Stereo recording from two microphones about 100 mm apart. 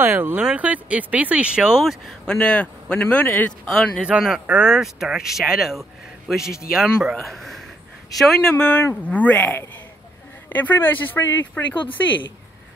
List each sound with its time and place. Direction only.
0.0 s speech: 20° right (ahead or behind); by 2.3 s centre (ahead or behind)
2.3 s speech: 15° left (ahead or behind)
3.6 s speech: 5° left (ahead or behind)
4.0 s speech: 5° right (ahead or behind); by 11.6 s 20° left (ahead or behind)
11.7 s speech: 55° left (ahead or behind)